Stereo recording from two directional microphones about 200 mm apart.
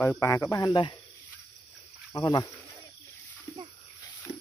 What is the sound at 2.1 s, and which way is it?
Speech, 20° left (ahead or behind).